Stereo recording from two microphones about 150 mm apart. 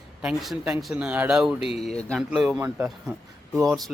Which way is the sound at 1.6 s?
40° left (ahead or behind).